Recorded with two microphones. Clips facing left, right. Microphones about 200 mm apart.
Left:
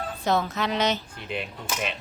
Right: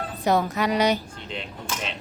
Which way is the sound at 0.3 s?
15° right (ahead or behind).